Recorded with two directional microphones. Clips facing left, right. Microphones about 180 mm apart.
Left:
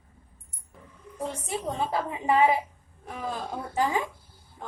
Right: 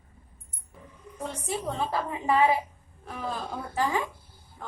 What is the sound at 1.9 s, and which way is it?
Speech, 20° left (ahead or behind).